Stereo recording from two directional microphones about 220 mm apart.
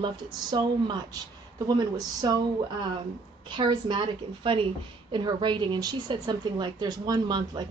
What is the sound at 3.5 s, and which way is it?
A woman's voice, 20° right (ahead or behind).